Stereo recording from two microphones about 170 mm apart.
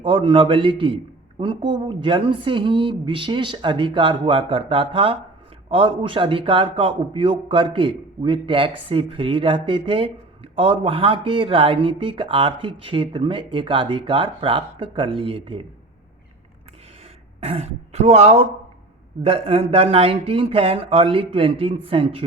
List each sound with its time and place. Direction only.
0.0 s a man's voice: 30° right (ahead or behind)
17.4 s a man's voice: 40° right (ahead or behind)